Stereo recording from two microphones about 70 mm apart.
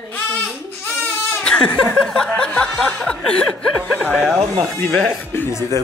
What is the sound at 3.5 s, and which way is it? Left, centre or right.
Speech, centre.